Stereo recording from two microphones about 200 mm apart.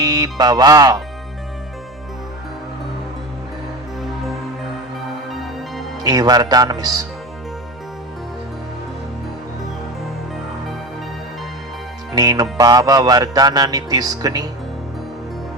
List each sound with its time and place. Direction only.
0.0 s music: 20° right (ahead or behind)
6.0 s music: 20° right (ahead or behind)
12.1 s music: 20° right (ahead or behind)